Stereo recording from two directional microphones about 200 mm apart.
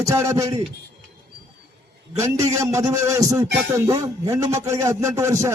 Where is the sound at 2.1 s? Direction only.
15° right (ahead or behind).